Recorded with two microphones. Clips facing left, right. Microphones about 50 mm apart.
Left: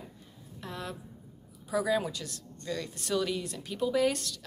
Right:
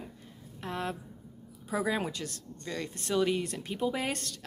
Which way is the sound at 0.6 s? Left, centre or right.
Right.